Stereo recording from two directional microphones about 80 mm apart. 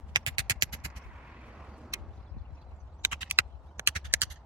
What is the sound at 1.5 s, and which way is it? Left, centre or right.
Vehicle, centre.